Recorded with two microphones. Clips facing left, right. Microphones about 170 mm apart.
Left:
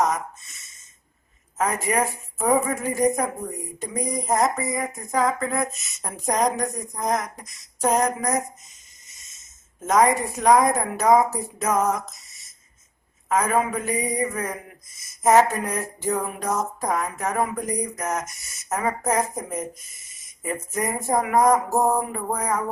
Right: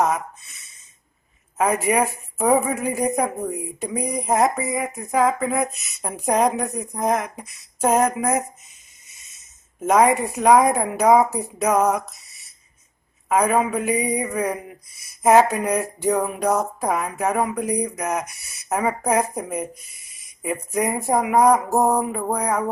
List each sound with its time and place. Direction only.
1.5 s speech: 15° right (ahead or behind)
9.8 s speech: 15° right (ahead or behind)
13.7 s speech: 15° right (ahead or behind)